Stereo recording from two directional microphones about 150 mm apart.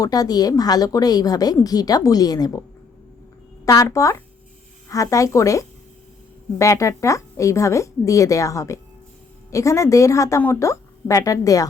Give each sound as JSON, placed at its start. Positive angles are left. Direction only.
{"t": 0.0, "sound": "a woman's voice", "side_deg": 25}
{"t": 3.7, "sound": "a woman's voice", "side_deg": 20}